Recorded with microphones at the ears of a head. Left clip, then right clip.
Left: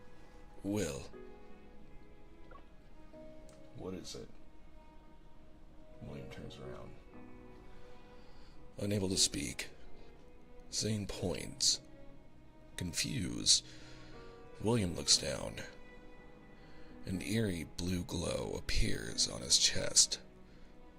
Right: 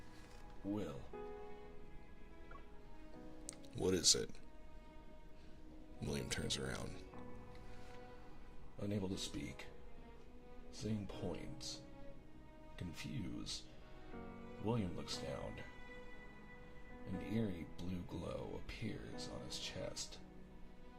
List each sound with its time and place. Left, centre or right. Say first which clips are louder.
0.6 s speech: left 7 dB; left
3.8 s speech: right 10 dB; right
6.1 s speech: right 7 dB; right
8.7 s speech: left 8 dB; left
10.7 s speech: left 9 dB; left
17.1 s speech: left 7 dB; left